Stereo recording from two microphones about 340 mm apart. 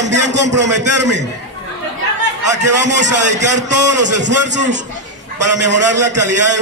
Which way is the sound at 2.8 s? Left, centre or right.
Right.